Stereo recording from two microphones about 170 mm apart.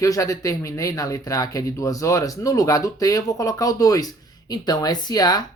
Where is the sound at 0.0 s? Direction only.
20° left (ahead or behind).